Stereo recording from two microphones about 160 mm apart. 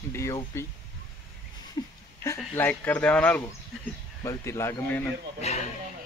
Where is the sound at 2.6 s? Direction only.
10° left (ahead or behind).